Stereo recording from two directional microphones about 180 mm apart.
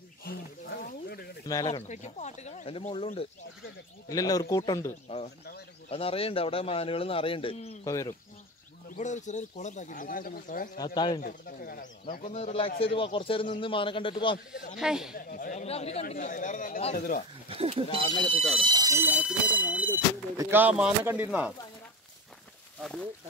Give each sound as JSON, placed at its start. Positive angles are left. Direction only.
{"t": 0.2, "sound": "wild animals", "side_deg": 60}
{"t": 1.4, "sound": "speech", "side_deg": 20}
{"t": 1.7, "sound": "a man's voice", "side_deg": 40}
{"t": 4.1, "sound": "speech", "side_deg": 20}
{"t": 5.9, "sound": "a man's voice", "side_deg": 30}
{"t": 7.8, "sound": "speech", "side_deg": 20}
{"t": 8.9, "sound": "speech", "side_deg": 40}
{"t": 10.8, "sound": "speech", "side_deg": 25}
{"t": 11.2, "sound": "speech", "side_deg": 55}
{"t": 14.8, "sound": "speech", "side_deg": -5}
{"t": 15.1, "sound": "speech", "side_deg": 50}
{"t": 15.6, "sound": "speech", "side_deg": 35}
{"t": 17.5, "sound": "speech", "side_deg": -30}